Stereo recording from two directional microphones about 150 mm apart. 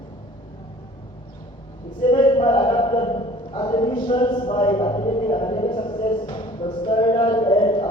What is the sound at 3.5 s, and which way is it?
A man's voice, 30° left (ahead or behind).